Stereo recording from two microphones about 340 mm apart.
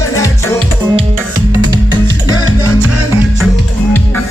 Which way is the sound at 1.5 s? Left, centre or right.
Centre.